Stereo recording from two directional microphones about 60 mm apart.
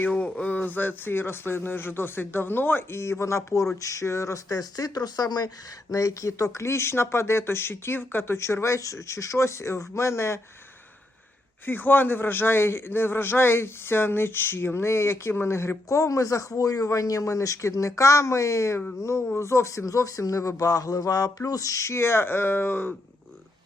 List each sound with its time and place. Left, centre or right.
0.1 s a man's voice: left
5.9 s speech: left
11.6 s a man's voice: left
15.9 s a man's voice: left